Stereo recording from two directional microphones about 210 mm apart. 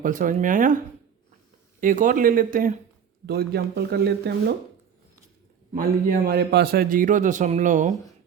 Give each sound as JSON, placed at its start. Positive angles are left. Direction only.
{"t": 0.0, "sound": "a man's voice", "side_deg": -40}
{"t": 1.8, "sound": "a man's voice", "side_deg": -40}
{"t": 5.7, "sound": "a man's voice", "side_deg": -45}